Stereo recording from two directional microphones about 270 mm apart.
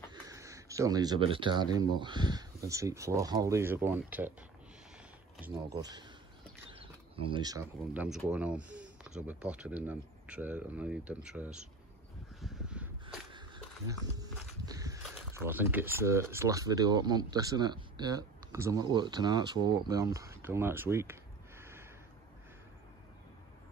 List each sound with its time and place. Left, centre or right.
0.1 s speech: centre
5.4 s speech: centre
12.4 s a sound: centre
13.8 s walk: centre
15.3 s speech: centre